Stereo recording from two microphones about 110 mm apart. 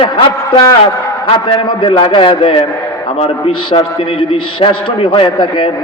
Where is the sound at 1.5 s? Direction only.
50° left (ahead or behind).